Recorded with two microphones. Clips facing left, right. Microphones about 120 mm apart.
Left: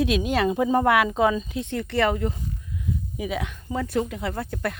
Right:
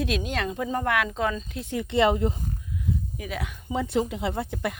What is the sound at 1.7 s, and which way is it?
Speech, 15° right (ahead or behind).